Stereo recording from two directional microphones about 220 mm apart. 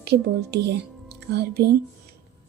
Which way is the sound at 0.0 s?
50° right (ahead or behind).